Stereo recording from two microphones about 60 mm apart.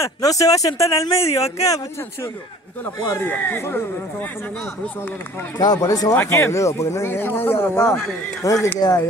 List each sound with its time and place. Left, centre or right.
0.2 s speech: left
3.2 s speech: left
5.6 s speech: left
6.5 s speech: left
7.1 s speech: left
8.4 s speech: left
8.7 s speech: left